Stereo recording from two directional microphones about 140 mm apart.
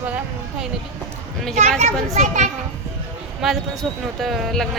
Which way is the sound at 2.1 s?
60° right (ahead or behind).